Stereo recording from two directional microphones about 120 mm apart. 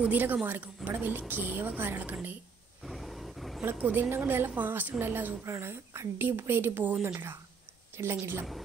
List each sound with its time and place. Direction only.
0.0 s a woman's voice: 15° right (ahead or behind)
2.8 s wild animals: centre (ahead or behind)
3.8 s a woman's voice: 15° right (ahead or behind)